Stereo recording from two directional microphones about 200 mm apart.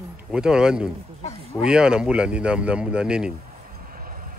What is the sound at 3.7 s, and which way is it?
Vehicle, 45° right (ahead or behind).